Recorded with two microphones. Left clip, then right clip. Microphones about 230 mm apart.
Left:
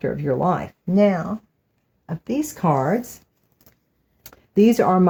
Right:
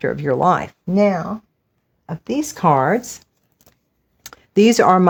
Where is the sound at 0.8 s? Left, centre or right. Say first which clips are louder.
Right 1 dB; right.